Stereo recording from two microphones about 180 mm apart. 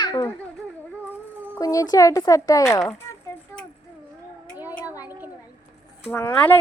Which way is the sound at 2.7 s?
15° left (ahead or behind).